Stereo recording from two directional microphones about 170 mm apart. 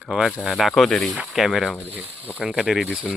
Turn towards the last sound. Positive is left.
turn(degrees=-5)  # may be behind; listen again after turning